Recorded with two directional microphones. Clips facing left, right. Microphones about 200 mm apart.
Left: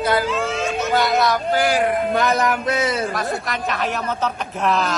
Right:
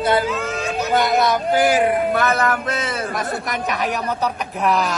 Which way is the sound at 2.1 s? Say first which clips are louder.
Even; 15° left (ahead or behind).